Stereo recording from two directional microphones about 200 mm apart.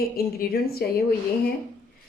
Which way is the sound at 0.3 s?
50° left (ahead or behind).